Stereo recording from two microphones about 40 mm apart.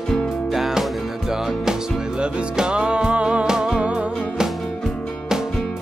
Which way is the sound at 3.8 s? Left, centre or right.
Right.